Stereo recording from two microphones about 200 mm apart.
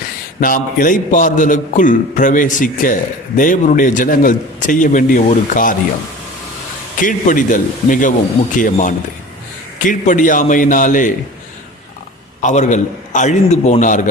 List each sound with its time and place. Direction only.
0.3 s a man's voice: 45° left (ahead or behind)
7.0 s a man's voice: 40° left (ahead or behind)
12.4 s a man's voice: 40° left (ahead or behind)